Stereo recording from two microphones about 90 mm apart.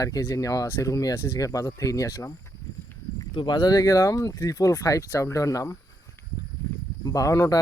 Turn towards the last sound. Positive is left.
turn(degrees=35)  # may be behind; listen again after turning